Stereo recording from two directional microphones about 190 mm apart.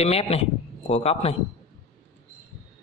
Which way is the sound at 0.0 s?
35° left (ahead or behind).